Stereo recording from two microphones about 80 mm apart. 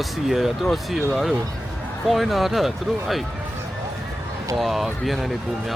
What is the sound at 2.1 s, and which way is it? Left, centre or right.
Speech, centre.